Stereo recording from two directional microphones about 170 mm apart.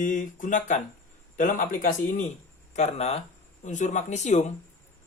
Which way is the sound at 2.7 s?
40° left (ahead or behind).